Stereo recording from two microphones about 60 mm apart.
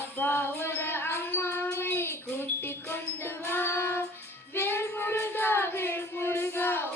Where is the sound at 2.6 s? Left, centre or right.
Left.